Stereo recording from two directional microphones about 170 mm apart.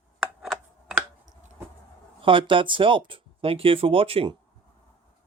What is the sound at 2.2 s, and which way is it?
Speech, 30° right (ahead or behind).